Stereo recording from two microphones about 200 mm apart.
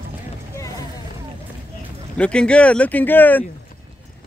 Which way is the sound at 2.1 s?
5° left (ahead or behind).